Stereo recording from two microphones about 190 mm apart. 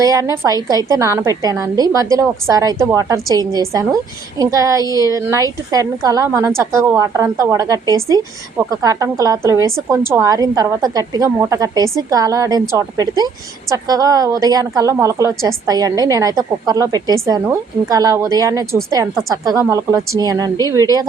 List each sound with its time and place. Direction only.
0.0 s a woman's voice: 20° right (ahead or behind)